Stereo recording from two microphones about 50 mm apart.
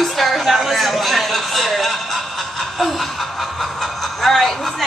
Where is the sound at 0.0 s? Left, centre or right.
Centre.